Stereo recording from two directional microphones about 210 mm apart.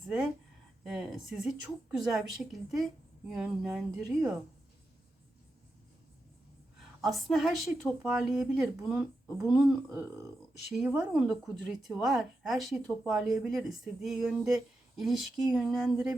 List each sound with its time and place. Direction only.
0.9 s a woman's voice: centre (ahead or behind)
7.0 s a woman's voice: centre (ahead or behind)
9.9 s speech: 15° right (ahead or behind)
10.7 s a woman's voice: 5° right (ahead or behind)